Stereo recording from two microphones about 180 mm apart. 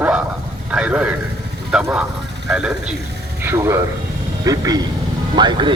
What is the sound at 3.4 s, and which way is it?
A woman's voice, 15° right (ahead or behind).